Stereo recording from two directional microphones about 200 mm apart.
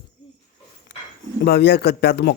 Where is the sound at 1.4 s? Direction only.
55° left (ahead or behind).